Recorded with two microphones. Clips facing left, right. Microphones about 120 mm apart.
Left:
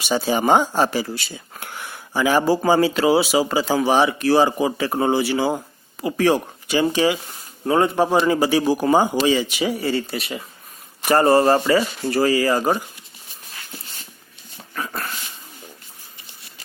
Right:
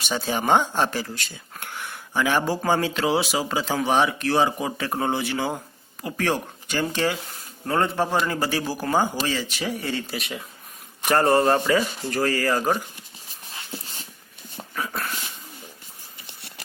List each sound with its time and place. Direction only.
0.0 s a man's voice: 10° left (ahead or behind)
14.8 s dog: centre (ahead or behind)